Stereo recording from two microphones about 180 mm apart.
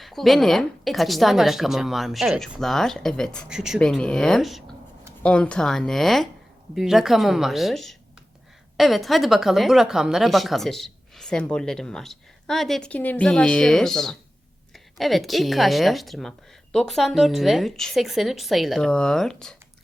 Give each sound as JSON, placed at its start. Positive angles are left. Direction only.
{"t": 0.0, "sound": "speech", "side_deg": 0}